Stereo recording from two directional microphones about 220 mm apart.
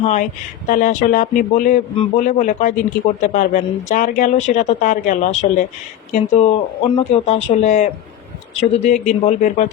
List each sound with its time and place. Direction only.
0.0 s speech: 35° left (ahead or behind)